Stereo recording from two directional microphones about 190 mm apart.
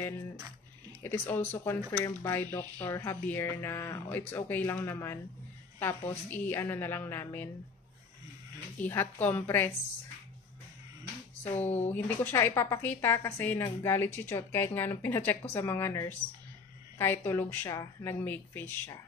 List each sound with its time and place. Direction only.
1.0 s speech: 10° left (ahead or behind)
8.7 s speech: 10° left (ahead or behind)
11.9 s speech: 10° left (ahead or behind)